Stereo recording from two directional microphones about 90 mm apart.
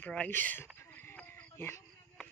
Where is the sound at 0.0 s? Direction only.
10° left (ahead or behind).